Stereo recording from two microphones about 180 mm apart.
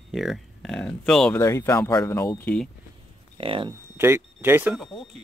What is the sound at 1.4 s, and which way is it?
Speech, 15° left (ahead or behind).